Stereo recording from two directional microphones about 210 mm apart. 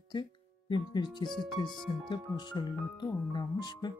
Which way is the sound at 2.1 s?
20° left (ahead or behind).